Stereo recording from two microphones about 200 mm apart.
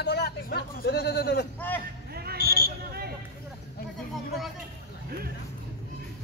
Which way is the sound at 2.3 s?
50° left (ahead or behind).